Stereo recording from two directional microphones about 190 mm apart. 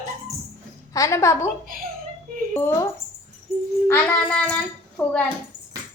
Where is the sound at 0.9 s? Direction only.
15° left (ahead or behind).